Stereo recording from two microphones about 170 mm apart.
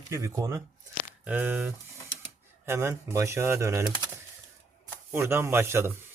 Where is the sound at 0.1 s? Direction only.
20° right (ahead or behind).